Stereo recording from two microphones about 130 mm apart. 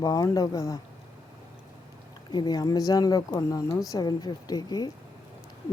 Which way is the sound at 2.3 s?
35° left (ahead or behind).